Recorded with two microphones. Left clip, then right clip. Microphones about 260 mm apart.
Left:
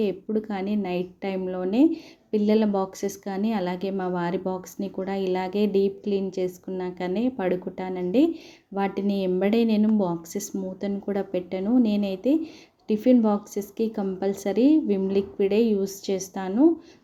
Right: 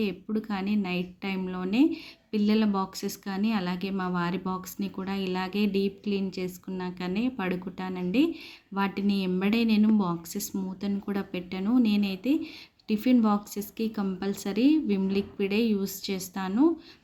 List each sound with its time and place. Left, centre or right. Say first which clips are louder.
0.0 s a woman's voice: left 6 dB; centre